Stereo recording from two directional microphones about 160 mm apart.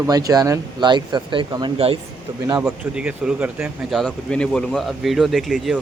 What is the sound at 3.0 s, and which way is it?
Speech, 5° right (ahead or behind).